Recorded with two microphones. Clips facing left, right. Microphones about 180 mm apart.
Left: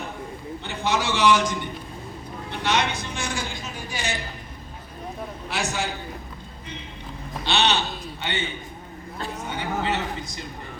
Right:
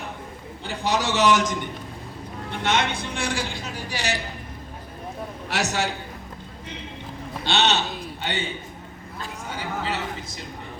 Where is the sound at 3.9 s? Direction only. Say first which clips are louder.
Right 2 dB; 75° right (ahead or behind).